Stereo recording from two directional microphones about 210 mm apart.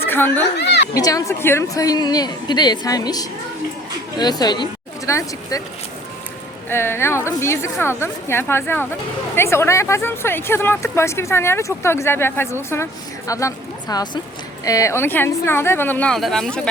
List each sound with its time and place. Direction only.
0.1 s speech: 10° left (ahead or behind)
0.6 s a sound: 55° left (ahead or behind)
0.9 s speech: 15° left (ahead or behind)
6.7 s speech: 10° left (ahead or behind)